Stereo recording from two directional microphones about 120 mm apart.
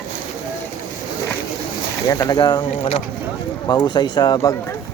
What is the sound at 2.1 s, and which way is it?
Speech, 30° left (ahead or behind).